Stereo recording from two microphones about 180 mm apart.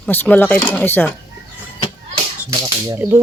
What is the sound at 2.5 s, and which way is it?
Speech, 15° right (ahead or behind).